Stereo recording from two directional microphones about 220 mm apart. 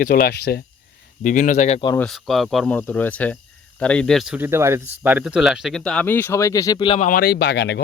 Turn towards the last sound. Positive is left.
turn(degrees=50)  # may be behind; listen again after turning